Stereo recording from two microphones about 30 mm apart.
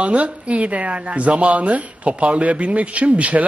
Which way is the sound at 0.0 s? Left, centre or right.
Right.